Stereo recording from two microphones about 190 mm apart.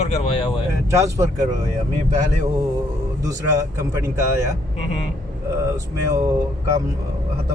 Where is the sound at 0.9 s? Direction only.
15° right (ahead or behind).